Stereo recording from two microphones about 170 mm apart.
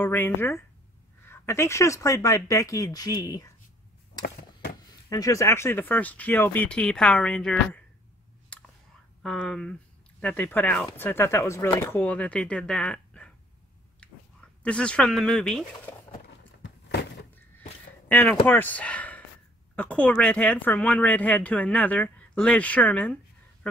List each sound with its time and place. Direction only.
0.0 s speech: 10° left (ahead or behind)
5.1 s speech: 20° left (ahead or behind)
8.5 s whispering: 5° left (ahead or behind)
9.2 s speech: 5° left (ahead or behind)
14.6 s speech: 5° left (ahead or behind)
16.6 s a sound: 75° left (ahead or behind)
18.0 s speech: 10° left (ahead or behind)